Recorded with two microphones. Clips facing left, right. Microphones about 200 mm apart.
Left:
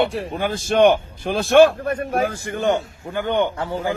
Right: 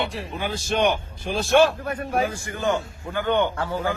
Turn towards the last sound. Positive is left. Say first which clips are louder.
# left 2 dB
turn(degrees=20)  # may be behind; listen again after turning